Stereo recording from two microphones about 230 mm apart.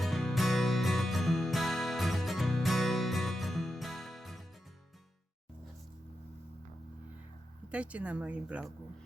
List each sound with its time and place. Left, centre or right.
0.0 s music: centre
7.7 s speech: centre